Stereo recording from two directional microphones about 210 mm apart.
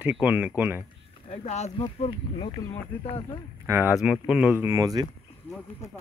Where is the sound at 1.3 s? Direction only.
30° left (ahead or behind).